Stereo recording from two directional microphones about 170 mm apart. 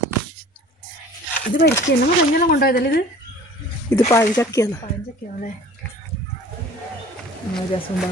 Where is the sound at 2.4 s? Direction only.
60° left (ahead or behind).